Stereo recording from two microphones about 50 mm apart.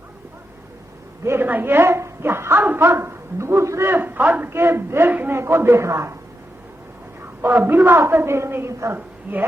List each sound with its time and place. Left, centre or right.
1.4 s a woman's voice: right
3.8 s a man's voice: right
4.4 s a woman's voice: right
7.4 s a woman's voice: right
9.0 s speech: right